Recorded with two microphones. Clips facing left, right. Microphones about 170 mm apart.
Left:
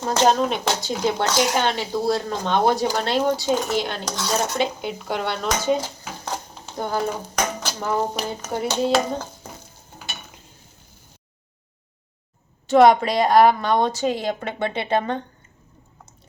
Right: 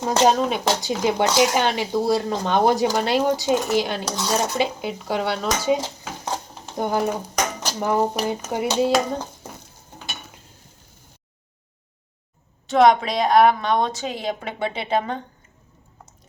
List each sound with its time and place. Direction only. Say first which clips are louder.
0.0 s speech: right 1 dB; 5° right (ahead or behind)
2.8 s dishes: right 1 dB; 5° right (ahead or behind)
6.7 s speech: right 2 dB; 15° right (ahead or behind)
12.6 s dishes: left 2 dB; centre (ahead or behind)